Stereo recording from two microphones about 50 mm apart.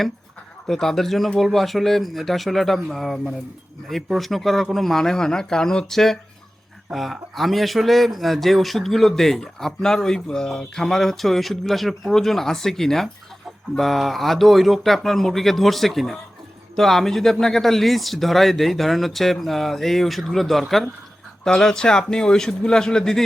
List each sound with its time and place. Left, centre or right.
0.7 s a man's voice: centre